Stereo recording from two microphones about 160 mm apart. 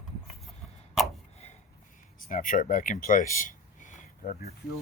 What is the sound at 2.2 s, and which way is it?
Speech, 55° left (ahead or behind).